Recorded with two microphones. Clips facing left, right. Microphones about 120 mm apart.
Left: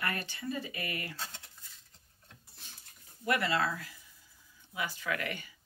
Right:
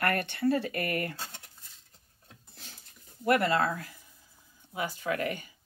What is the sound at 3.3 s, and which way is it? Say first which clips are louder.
Speech: right 5 dB; 50° right (ahead or behind).